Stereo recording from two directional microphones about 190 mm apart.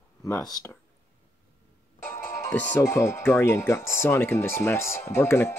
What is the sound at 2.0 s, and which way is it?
Speech, 15° left (ahead or behind).